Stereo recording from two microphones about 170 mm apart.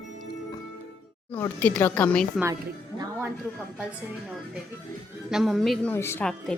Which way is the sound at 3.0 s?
15° right (ahead or behind).